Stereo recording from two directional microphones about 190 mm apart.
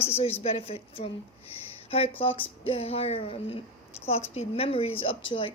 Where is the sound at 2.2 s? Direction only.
30° left (ahead or behind).